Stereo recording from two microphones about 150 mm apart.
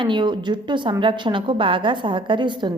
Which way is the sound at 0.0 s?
30° right (ahead or behind).